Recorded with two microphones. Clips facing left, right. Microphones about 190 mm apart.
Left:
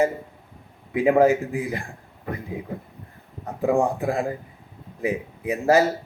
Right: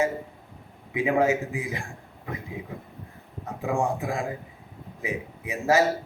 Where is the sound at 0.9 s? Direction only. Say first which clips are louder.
Left 6 dB; 35° left (ahead or behind).